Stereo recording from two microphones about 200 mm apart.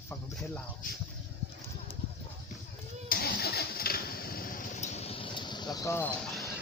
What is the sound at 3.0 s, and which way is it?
Vehicle, 50° left (ahead or behind).